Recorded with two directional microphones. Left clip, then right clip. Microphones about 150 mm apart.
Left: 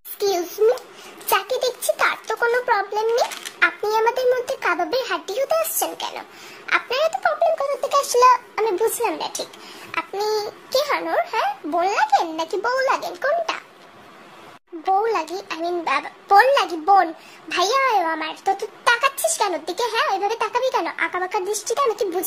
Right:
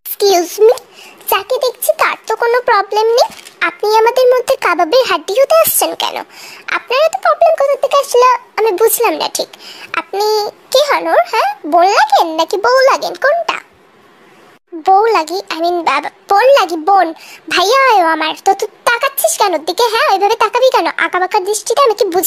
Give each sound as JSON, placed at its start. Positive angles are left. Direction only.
{"t": 0.2, "sound": "a child's voice", "side_deg": -45}
{"t": 14.8, "sound": "a child's voice", "side_deg": -40}